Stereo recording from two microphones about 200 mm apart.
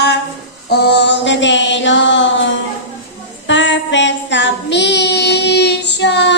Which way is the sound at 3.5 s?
65° left (ahead or behind).